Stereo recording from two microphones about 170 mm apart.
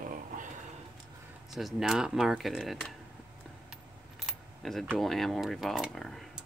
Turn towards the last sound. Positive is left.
turn(degrees=0)  # may be behind; listen again after turning